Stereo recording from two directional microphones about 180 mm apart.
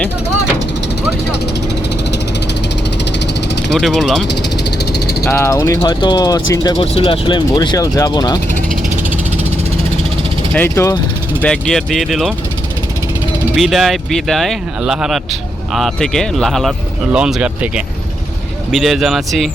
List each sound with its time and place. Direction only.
3.8 s speech: centre (ahead or behind)
5.3 s speech: 15° left (ahead or behind)
6.7 s speech: 35° left (ahead or behind)
10.5 s speech: 10° left (ahead or behind)
11.4 s speech: 5° left (ahead or behind)
13.6 s speech: centre (ahead or behind)